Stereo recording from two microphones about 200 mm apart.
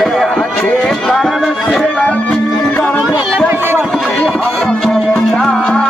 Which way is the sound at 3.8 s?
Centre (ahead or behind).